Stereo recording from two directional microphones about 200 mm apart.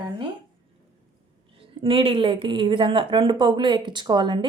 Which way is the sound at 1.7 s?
25° right (ahead or behind).